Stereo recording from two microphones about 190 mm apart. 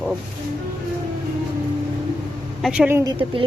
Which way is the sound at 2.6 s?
5° right (ahead or behind).